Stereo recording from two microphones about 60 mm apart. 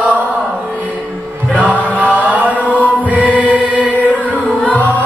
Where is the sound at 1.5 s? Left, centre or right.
Left.